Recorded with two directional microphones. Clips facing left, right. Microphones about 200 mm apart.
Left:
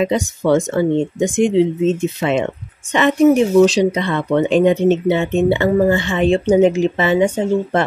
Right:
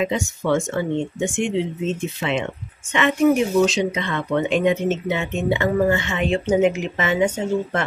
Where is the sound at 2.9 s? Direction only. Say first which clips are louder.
Left 5 dB; 35° left (ahead or behind).